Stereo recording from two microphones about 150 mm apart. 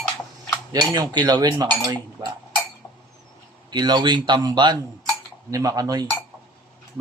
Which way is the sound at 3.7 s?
30° right (ahead or behind).